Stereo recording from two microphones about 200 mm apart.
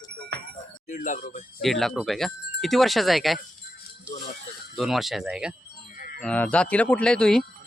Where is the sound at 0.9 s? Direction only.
40° left (ahead or behind).